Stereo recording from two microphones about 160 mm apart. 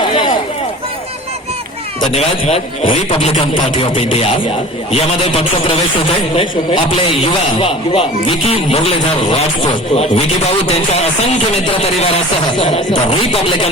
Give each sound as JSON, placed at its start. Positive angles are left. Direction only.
{"t": 0.1, "sound": "a sound", "side_deg": 30}
{"t": 2.1, "sound": "speech", "side_deg": 40}
{"t": 12.9, "sound": "speech", "side_deg": 35}